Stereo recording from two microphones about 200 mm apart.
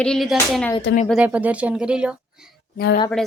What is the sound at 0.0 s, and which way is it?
Speech, centre (ahead or behind).